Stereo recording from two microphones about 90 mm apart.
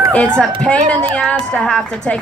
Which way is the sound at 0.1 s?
10° left (ahead or behind).